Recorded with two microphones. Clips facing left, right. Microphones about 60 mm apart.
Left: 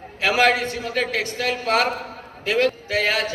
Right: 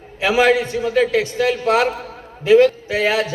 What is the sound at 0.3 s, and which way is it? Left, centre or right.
Speech, centre.